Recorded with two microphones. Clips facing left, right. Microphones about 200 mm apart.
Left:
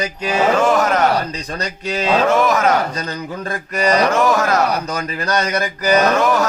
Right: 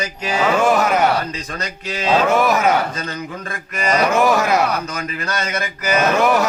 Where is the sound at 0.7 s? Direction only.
10° right (ahead or behind).